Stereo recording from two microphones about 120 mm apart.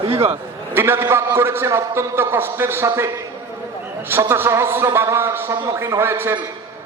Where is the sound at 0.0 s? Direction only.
50° right (ahead or behind).